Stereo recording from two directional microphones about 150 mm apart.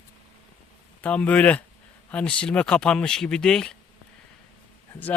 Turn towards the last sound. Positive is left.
turn(degrees=5)  # may be behind; listen again after turning